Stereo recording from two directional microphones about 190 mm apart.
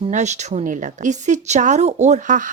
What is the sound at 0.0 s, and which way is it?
A woman's voice, 35° right (ahead or behind).